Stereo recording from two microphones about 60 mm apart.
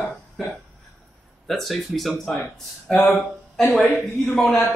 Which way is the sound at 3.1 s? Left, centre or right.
Centre.